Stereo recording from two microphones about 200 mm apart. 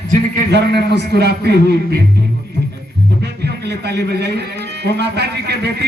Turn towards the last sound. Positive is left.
turn(degrees=-55)  # may be behind; listen again after turning